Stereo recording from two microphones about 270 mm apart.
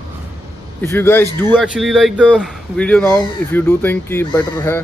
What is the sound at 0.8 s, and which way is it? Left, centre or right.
Speech, centre.